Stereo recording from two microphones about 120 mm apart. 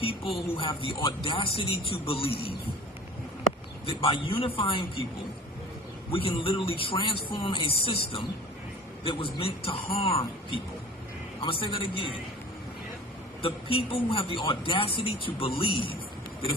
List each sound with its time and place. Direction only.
0.0 s music: 50° left (ahead or behind)
0.8 s speech: 45° left (ahead or behind)
3.8 s speech: 50° left (ahead or behind)
6.1 s speech: 50° left (ahead or behind)
13.4 s speech: 50° left (ahead or behind)